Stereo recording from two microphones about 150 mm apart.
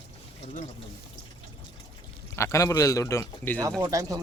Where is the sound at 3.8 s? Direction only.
20° right (ahead or behind).